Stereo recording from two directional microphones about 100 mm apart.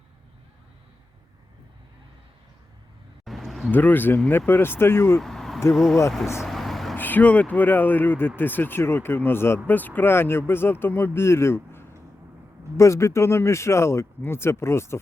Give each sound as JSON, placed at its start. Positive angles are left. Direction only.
{"t": 3.2, "sound": "a sound", "side_deg": 0}
{"t": 3.7, "sound": "speech", "side_deg": 20}
{"t": 5.2, "sound": "a sound", "side_deg": 5}
{"t": 5.7, "sound": "speech", "side_deg": 0}
{"t": 6.4, "sound": "vehicle", "side_deg": 0}
{"t": 6.9, "sound": "speech", "side_deg": 20}